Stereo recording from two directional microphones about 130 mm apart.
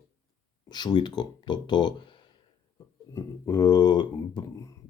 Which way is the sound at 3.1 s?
25° left (ahead or behind).